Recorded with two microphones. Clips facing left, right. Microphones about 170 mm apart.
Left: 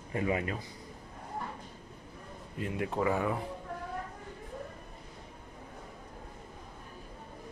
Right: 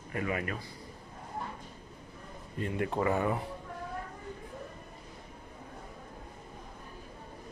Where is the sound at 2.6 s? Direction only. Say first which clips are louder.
Right 1 dB; centre (ahead or behind).